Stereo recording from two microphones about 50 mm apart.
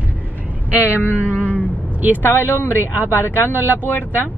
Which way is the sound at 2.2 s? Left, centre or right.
Left.